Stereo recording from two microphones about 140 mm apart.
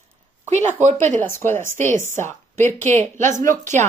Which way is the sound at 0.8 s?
60° right (ahead or behind).